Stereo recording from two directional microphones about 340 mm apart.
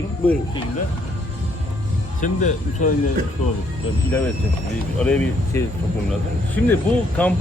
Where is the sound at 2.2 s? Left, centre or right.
Left.